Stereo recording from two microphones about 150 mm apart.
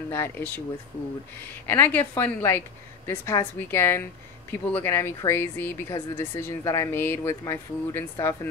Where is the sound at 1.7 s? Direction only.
15° left (ahead or behind).